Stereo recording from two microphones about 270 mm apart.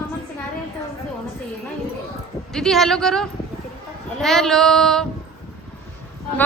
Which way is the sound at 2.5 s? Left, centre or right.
Centre.